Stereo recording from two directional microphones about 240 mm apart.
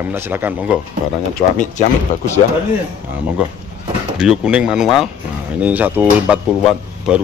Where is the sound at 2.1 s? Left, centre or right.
Left.